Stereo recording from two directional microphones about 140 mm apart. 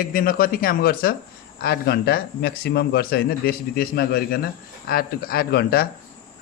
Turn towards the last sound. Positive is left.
turn(degrees=90)